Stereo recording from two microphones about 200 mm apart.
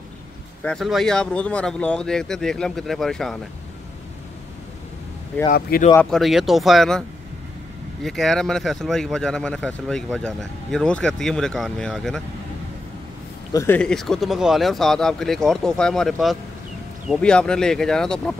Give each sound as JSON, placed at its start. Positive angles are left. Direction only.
{"t": 0.6, "sound": "speech", "side_deg": 5}
{"t": 5.5, "sound": "speech", "side_deg": 45}
{"t": 5.9, "sound": "speech", "side_deg": 0}
{"t": 13.5, "sound": "speech", "side_deg": 15}